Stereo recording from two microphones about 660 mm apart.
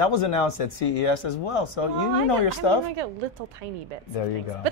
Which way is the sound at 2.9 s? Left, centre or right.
Right.